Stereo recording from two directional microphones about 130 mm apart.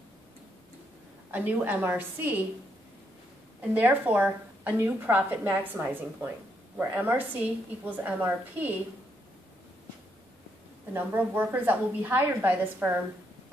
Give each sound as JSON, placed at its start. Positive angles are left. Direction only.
{"t": 1.3, "sound": "a woman's voice", "side_deg": -10}
{"t": 3.7, "sound": "a woman's voice", "side_deg": -15}
{"t": 10.9, "sound": "a woman's voice", "side_deg": -15}